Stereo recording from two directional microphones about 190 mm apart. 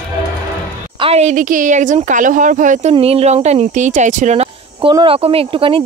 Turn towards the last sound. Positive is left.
turn(degrees=-30)  # may be behind; listen again after turning